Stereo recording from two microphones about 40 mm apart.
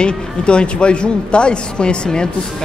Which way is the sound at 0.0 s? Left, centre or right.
Left.